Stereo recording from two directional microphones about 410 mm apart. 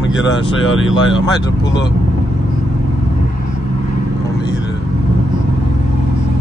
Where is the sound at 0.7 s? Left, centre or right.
Left.